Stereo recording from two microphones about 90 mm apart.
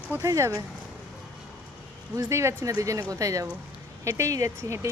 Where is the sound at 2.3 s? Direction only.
30° right (ahead or behind).